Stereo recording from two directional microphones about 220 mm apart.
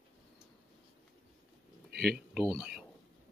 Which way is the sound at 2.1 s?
Centre (ahead or behind).